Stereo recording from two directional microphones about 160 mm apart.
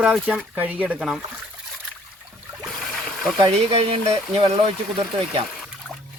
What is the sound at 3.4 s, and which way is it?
Speech, 35° right (ahead or behind).